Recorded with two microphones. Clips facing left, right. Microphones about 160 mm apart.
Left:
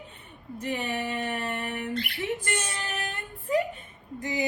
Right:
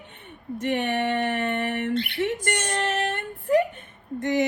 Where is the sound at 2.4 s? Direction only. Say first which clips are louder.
Right 7 dB; 70° right (ahead or behind).